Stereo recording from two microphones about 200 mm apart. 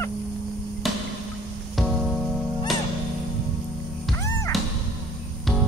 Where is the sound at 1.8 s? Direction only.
Centre (ahead or behind).